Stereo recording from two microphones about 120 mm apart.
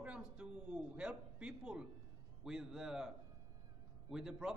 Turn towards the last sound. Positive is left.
turn(degrees=-5)  # may be behind; listen again after turning